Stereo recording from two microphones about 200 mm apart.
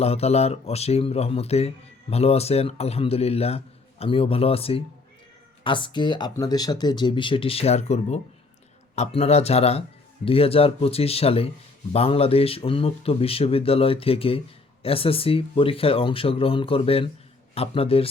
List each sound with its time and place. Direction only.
0.0 s speech: 30° left (ahead or behind)